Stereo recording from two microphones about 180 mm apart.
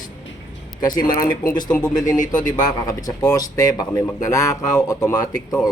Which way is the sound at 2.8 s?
20° left (ahead or behind).